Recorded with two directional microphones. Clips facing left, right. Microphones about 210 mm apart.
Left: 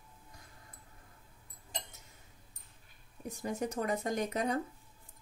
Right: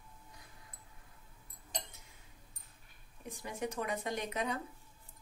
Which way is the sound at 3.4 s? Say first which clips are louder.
Left 4 dB; 45° left (ahead or behind).